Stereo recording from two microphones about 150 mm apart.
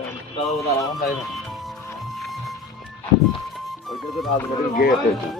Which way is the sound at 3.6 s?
Centre (ahead or behind).